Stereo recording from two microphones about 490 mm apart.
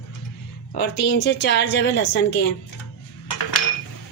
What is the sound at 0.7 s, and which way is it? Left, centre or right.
A woman's voice, left.